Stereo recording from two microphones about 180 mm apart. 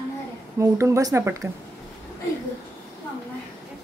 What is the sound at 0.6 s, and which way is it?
Speech, 15° right (ahead or behind).